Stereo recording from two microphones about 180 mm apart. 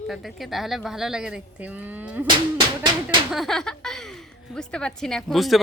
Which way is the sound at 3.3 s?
Centre (ahead or behind).